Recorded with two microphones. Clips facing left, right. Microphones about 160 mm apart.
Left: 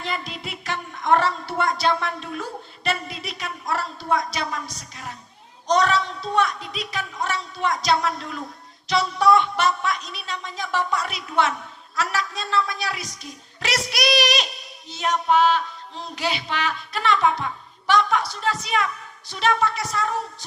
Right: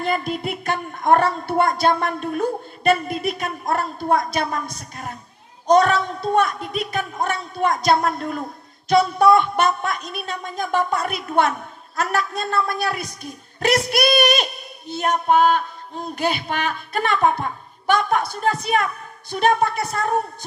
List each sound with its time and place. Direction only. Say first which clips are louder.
0.0 s a man's voice: right 8 dB; 50° right (ahead or behind)